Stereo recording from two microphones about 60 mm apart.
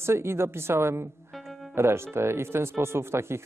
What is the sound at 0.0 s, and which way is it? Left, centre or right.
Speech, right.